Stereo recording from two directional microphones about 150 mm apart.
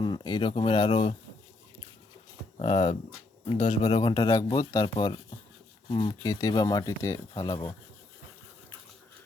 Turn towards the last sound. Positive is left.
turn(degrees=30)  # may be behind; listen again after turning